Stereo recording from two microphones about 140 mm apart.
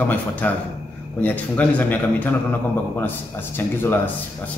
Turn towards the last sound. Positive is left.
turn(degrees=15)  # may be behind; listen again after turning